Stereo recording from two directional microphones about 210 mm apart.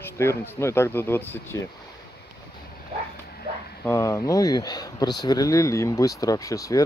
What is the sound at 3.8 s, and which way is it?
Speech, 15° left (ahead or behind).